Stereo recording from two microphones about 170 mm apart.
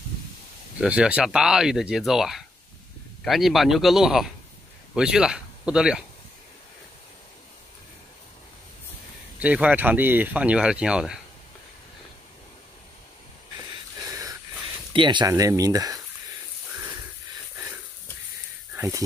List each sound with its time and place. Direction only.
0.7 s speech: 5° right (ahead or behind)
9.4 s speech: 5° right (ahead or behind)
14.9 s speech: 30° right (ahead or behind)
18.8 s speech: 20° right (ahead or behind)